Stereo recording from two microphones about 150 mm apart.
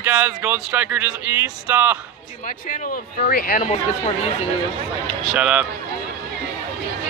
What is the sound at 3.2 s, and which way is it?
Speech, 75° left (ahead or behind).